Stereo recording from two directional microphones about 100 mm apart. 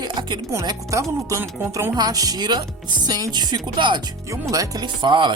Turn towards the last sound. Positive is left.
turn(degrees=-50)  # may be behind; listen again after turning